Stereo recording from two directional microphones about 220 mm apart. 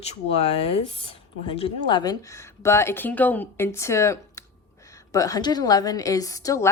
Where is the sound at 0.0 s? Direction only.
30° left (ahead or behind).